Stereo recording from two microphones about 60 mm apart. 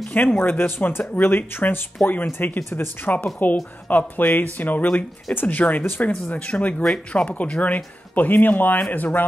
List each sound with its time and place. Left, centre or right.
0.1 s speech: left